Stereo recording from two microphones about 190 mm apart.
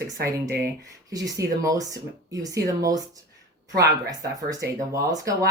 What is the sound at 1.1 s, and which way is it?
Speech, 20° right (ahead or behind).